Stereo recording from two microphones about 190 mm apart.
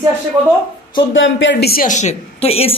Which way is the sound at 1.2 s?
75° left (ahead or behind).